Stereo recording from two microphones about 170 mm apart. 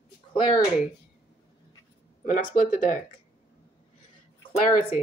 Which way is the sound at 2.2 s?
50° left (ahead or behind).